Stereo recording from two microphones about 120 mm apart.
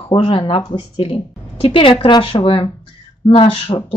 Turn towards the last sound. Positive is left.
turn(degrees=50)  # may be behind; listen again after turning